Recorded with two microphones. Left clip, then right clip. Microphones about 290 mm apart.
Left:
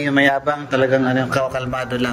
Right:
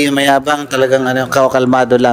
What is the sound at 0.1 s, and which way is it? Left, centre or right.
A man's voice, right.